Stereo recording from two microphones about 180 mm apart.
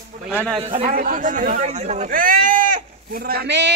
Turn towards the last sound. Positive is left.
turn(degrees=-70)  # may be behind; listen again after turning